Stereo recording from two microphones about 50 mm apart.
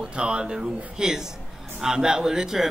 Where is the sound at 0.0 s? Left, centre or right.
Right.